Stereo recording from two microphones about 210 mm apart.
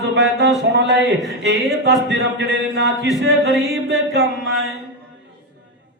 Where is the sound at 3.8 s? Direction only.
55° right (ahead or behind).